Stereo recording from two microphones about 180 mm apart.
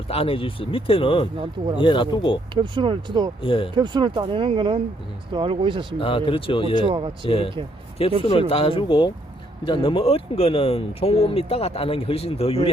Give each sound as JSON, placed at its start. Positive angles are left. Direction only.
{"t": 0.1, "sound": "speech", "side_deg": 30}
{"t": 2.6, "sound": "speech", "side_deg": -25}
{"t": 3.4, "sound": "speech", "side_deg": 30}
{"t": 3.8, "sound": "speech", "side_deg": -25}
{"t": 6.0, "sound": "speech", "side_deg": 30}
{"t": 6.8, "sound": "speech", "side_deg": -30}
{"t": 7.3, "sound": "speech", "side_deg": 30}